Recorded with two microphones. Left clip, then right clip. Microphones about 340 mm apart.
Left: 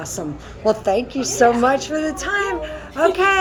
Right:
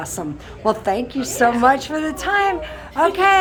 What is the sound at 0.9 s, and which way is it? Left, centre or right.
Speech, right.